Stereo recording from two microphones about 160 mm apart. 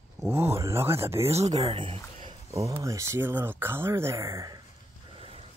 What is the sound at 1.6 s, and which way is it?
Speech, 35° right (ahead or behind).